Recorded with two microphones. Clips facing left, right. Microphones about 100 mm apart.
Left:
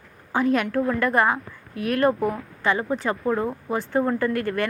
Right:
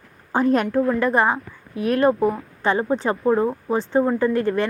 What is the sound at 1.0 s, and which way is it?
Speech, 25° right (ahead or behind).